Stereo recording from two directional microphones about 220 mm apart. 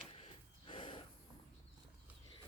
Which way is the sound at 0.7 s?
20° left (ahead or behind).